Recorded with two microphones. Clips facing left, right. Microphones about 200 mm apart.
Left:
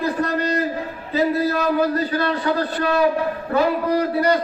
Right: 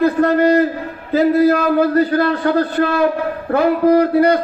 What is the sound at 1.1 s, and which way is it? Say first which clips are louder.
A man's voice: right 7 dB; 55° right (ahead or behind).